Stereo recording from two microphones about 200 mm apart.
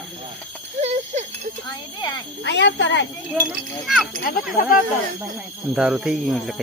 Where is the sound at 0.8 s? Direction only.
35° right (ahead or behind).